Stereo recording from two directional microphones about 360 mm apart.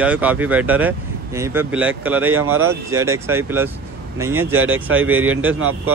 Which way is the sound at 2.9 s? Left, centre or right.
Centre.